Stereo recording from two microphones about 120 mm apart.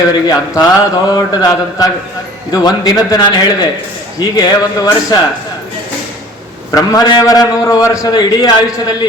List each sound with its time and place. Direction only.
0.1 s a man's voice: 35° left (ahead or behind)
6.7 s a man's voice: 30° left (ahead or behind)